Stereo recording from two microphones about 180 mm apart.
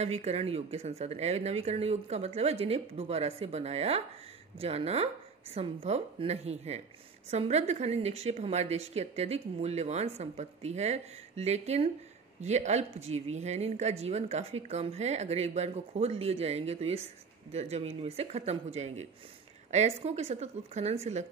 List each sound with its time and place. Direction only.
0.0 s a woman's voice: 35° right (ahead or behind)